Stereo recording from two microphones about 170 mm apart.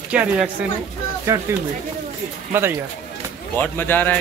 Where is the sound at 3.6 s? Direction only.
10° left (ahead or behind).